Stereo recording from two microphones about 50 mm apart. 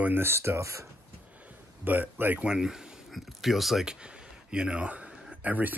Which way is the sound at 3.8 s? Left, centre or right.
Centre.